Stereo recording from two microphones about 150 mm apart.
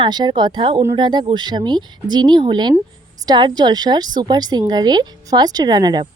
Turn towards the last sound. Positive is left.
turn(degrees=-30)  # may be behind; listen again after turning